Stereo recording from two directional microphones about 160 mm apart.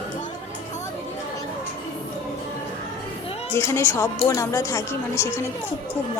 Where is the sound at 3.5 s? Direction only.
15° left (ahead or behind).